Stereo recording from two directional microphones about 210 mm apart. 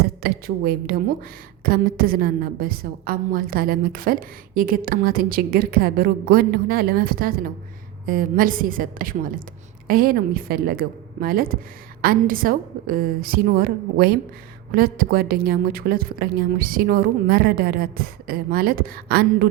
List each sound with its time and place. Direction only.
0.0 s a woman's voice: 45° right (ahead or behind)